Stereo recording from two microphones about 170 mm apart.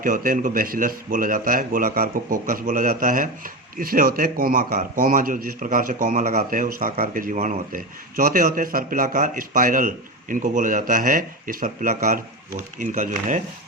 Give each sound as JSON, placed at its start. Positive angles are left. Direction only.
{"t": 0.0, "sound": "speech", "side_deg": -55}